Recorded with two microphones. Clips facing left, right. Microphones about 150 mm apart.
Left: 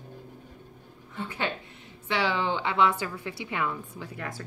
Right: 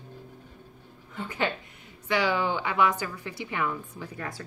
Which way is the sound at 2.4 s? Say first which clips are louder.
Even; 20° left (ahead or behind).